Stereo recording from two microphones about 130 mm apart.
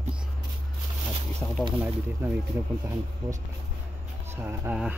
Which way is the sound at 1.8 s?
15° right (ahead or behind).